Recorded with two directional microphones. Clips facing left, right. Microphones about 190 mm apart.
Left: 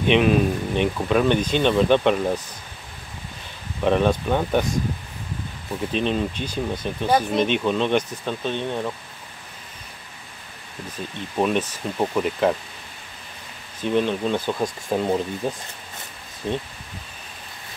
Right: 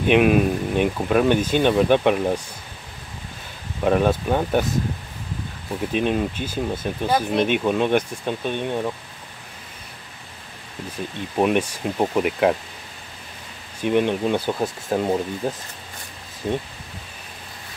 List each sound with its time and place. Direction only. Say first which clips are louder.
0.0 s speech: right 2 dB; 10° right (ahead or behind)
3.8 s speech: right 1 dB; 5° right (ahead or behind)
5.9 s speech: right 2 dB; 10° right (ahead or behind)
10.9 s speech: right 2 dB; 10° right (ahead or behind)
13.7 s speech: right 2 dB; 15° right (ahead or behind)